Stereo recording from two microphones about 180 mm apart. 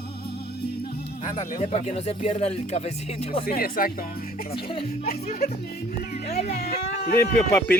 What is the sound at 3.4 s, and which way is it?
Speech, 55° left (ahead or behind).